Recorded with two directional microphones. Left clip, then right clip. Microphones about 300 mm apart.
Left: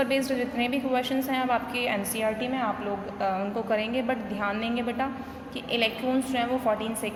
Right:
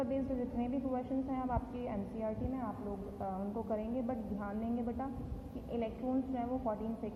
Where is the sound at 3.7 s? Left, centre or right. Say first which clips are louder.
Left 12 dB; centre.